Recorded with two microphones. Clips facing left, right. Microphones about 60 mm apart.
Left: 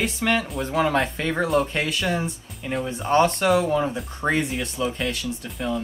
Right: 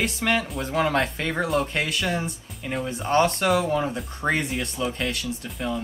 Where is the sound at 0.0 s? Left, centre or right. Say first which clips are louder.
Left 1 dB; centre.